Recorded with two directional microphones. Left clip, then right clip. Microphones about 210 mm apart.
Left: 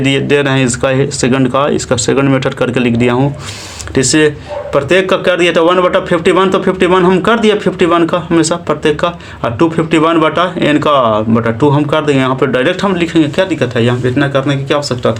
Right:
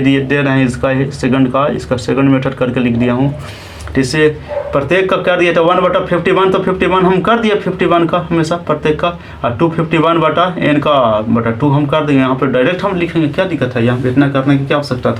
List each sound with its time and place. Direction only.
0.0 s a man's voice: 50° left (ahead or behind)